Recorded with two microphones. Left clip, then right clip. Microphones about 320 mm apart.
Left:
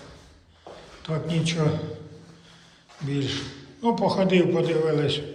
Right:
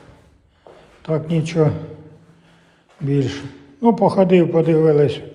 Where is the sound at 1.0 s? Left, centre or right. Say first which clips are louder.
Right 6 dB; centre.